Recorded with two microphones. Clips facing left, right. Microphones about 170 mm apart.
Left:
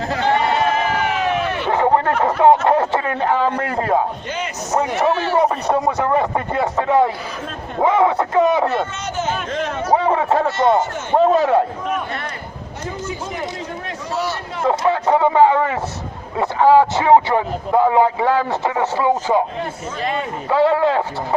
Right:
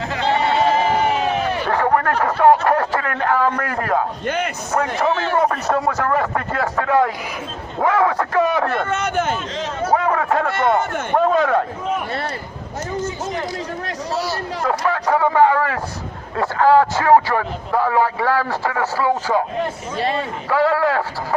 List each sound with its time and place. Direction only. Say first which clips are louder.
0.9 s crowd: right 1 dB; 40° right (ahead or behind)
1.6 s a sound: left 3 dB; 20° left (ahead or behind)
2.2 s a man's voice: left 1 dB; 25° left (ahead or behind)
4.7 s a man's voice: left 2 dB; 15° left (ahead or behind)
8.8 s speech: right 3 dB; 55° right (ahead or behind)
10.0 s a sound: left 2 dB; 25° left (ahead or behind)
11.1 s a man's voice: left 3 dB; 25° left (ahead or behind)
14.6 s a man's voice: left 4 dB; 25° left (ahead or behind)
20.0 s speech: right 2 dB; 35° right (ahead or behind)
20.5 s a man's voice: left 2 dB; 25° left (ahead or behind)